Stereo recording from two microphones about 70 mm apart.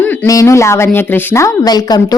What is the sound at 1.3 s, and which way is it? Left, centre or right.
Speech, left.